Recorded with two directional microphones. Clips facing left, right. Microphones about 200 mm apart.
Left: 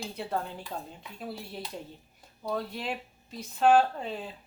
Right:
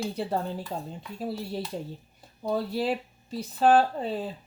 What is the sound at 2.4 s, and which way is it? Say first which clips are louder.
Speech: right 6 dB; 30° right (ahead or behind).